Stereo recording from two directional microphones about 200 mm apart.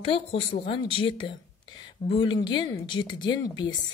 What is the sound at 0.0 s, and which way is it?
A woman's voice, 25° left (ahead or behind).